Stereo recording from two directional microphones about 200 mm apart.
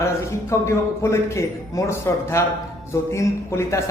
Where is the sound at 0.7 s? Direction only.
15° left (ahead or behind).